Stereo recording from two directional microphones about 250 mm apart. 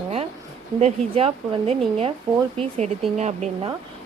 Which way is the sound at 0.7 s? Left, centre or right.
Right.